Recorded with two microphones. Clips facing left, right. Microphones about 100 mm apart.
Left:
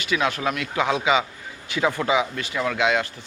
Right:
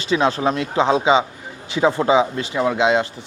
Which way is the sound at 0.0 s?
30° right (ahead or behind).